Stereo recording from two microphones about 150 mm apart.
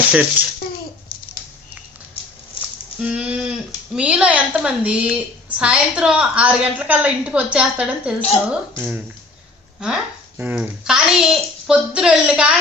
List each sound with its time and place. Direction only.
0.1 s speech: 10° right (ahead or behind)
3.0 s speech: 5° right (ahead or behind)
8.2 s a woman's voice: 40° left (ahead or behind)
8.8 s a child's voice: 10° right (ahead or behind)